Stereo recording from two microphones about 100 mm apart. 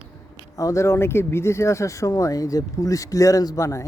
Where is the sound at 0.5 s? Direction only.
35° left (ahead or behind).